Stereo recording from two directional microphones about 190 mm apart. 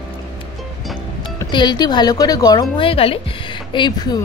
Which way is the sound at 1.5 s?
20° left (ahead or behind).